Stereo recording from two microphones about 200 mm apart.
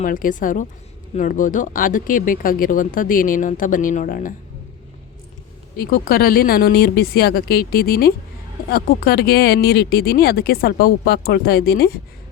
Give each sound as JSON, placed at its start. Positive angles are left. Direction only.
{"t": 0.0, "sound": "a woman's voice", "side_deg": 40}
{"t": 5.7, "sound": "speech", "side_deg": 50}